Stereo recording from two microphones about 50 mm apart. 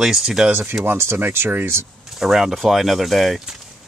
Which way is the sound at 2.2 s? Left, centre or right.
Centre.